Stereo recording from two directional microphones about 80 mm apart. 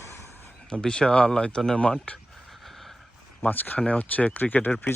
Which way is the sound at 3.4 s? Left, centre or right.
Left.